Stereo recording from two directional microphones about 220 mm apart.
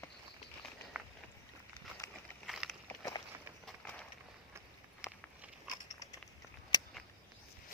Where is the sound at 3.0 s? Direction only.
15° left (ahead or behind).